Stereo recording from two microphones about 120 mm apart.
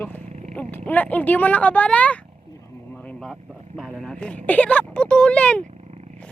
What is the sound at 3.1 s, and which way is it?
Vehicle, centre (ahead or behind).